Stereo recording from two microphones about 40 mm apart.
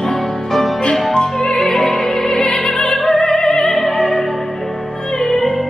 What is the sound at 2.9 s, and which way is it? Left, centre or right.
Opera, centre.